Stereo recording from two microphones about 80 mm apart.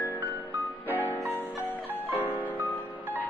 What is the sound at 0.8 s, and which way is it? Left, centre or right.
Music, left.